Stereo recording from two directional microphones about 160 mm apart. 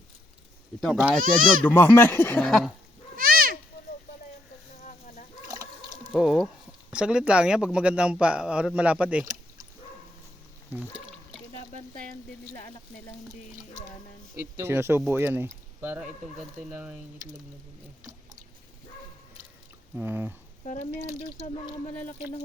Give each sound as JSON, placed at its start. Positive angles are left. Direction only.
{"t": 0.8, "sound": "speech", "side_deg": 0}
{"t": 1.2, "sound": "speech", "side_deg": -60}
{"t": 1.6, "sound": "speech", "side_deg": 15}
{"t": 3.2, "sound": "owl", "side_deg": -65}
{"t": 4.8, "sound": "a sound", "side_deg": 50}
{"t": 6.1, "sound": "speech", "side_deg": -5}
{"t": 10.7, "sound": "liquid", "side_deg": -10}
{"t": 14.3, "sound": "speech", "side_deg": -15}
{"t": 20.0, "sound": "speech", "side_deg": -10}